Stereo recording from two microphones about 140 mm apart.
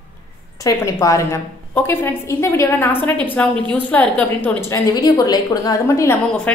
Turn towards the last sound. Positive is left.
turn(degrees=5)  # may be behind; listen again after turning